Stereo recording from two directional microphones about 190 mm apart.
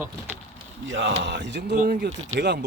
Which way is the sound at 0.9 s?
75° right (ahead or behind).